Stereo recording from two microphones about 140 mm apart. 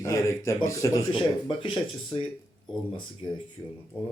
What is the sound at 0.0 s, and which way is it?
Speech, 20° left (ahead or behind).